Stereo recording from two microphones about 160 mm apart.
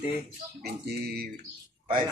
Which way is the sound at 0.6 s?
80° right.